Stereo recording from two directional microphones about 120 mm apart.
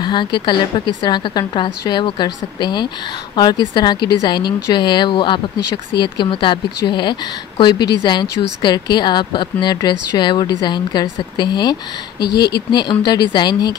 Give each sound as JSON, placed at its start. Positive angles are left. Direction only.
{"t": 0.0, "sound": "a woman's voice", "side_deg": 40}
{"t": 13.0, "sound": "a woman's voice", "side_deg": 40}